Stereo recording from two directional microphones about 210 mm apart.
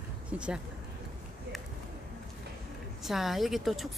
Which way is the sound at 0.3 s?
5° right (ahead or behind).